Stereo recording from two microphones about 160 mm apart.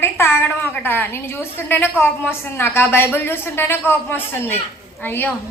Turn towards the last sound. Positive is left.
turn(degrees=10)  # may be behind; listen again after turning